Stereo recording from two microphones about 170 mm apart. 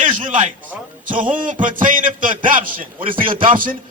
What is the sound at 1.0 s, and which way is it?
A man's voice, 50° right (ahead or behind).